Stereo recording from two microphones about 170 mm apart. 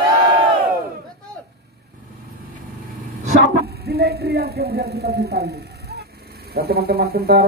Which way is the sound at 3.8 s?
70° right (ahead or behind).